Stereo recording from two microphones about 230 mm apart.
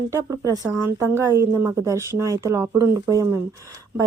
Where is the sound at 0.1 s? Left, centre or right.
Centre.